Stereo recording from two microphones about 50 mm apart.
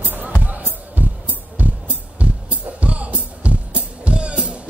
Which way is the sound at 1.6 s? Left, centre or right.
Right.